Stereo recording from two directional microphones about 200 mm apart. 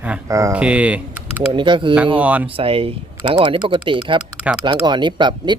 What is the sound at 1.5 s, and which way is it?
Speech, 25° right (ahead or behind).